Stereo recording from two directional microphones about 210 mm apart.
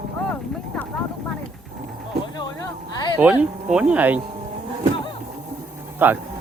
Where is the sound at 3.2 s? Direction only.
5° right (ahead or behind).